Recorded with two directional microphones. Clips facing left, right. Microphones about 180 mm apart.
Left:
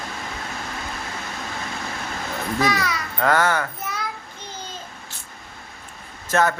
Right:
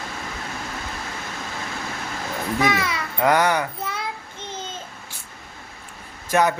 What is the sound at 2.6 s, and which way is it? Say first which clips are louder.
A child's voice: even; 25° right (ahead or behind).